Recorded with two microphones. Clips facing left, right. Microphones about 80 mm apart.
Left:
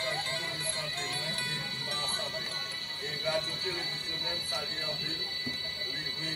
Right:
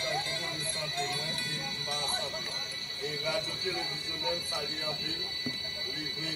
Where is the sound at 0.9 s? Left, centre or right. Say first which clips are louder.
Right 3 dB; left.